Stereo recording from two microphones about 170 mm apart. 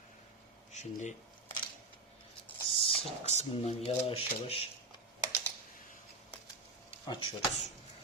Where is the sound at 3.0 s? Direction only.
40° left (ahead or behind).